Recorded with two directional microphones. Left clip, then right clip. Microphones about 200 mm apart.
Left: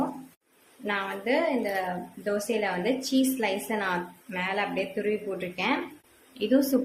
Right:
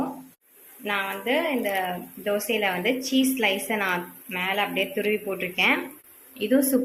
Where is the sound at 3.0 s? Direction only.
30° left (ahead or behind).